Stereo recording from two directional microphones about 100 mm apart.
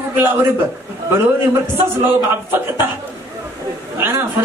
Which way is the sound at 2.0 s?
20° right (ahead or behind).